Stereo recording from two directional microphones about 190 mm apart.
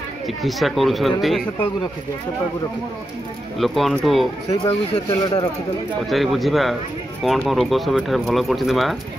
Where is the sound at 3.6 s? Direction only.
Centre (ahead or behind).